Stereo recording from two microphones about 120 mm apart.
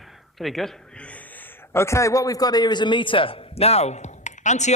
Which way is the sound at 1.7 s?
25° left (ahead or behind).